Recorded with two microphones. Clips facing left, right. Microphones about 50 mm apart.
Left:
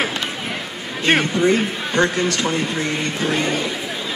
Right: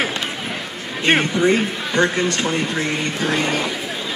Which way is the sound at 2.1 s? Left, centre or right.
Right.